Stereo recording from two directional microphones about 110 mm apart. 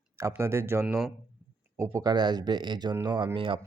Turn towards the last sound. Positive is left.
turn(degrees=-45)  # may be behind; listen again after turning